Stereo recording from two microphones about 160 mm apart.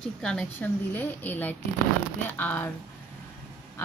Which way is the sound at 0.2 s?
5° left (ahead or behind).